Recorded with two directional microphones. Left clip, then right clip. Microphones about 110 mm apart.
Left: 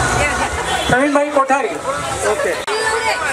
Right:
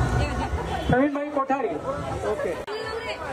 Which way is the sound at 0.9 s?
25° left (ahead or behind).